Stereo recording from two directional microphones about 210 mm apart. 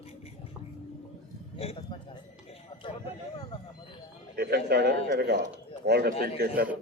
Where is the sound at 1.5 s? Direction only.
30° left (ahead or behind).